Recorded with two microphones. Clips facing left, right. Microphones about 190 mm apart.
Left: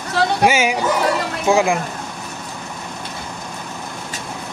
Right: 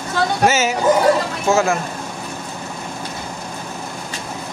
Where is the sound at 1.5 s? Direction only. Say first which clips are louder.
Left 1 dB; 15° left (ahead or behind).